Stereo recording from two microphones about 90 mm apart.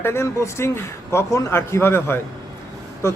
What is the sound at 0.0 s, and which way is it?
A man's voice, 30° left (ahead or behind).